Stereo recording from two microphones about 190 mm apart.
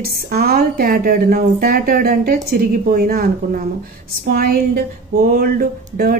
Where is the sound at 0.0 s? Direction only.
50° right (ahead or behind).